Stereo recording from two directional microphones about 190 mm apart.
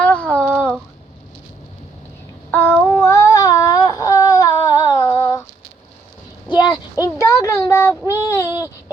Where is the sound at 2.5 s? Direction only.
10° left (ahead or behind).